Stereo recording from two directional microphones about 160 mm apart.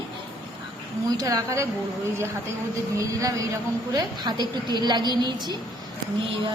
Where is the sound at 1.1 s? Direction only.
25° right (ahead or behind).